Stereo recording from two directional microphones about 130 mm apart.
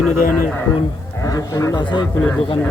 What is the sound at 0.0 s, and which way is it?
Speech, 10° left (ahead or behind).